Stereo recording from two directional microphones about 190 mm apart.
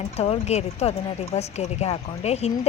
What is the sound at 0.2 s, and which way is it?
Speech, 35° left (ahead or behind).